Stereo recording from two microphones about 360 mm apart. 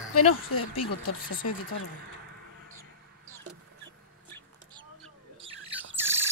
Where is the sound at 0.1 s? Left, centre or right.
Left.